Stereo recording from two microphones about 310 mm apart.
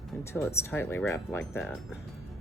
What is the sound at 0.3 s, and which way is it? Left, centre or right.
Speech, centre.